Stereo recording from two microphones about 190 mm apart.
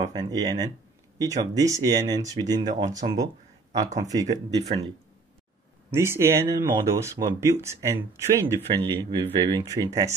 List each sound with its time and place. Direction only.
0.0 s speech: 20° right (ahead or behind)
3.8 s speech: 40° right (ahead or behind)
4.1 s speech: 20° right (ahead or behind)
5.9 s speech: 15° right (ahead or behind)